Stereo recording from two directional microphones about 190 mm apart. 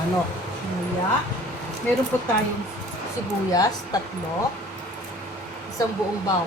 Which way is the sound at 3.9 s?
20° left (ahead or behind).